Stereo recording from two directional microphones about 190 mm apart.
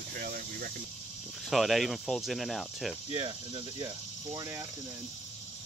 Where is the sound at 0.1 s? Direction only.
50° right (ahead or behind).